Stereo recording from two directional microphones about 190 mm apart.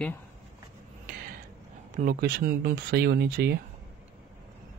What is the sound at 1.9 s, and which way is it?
Speech, 45° right (ahead or behind).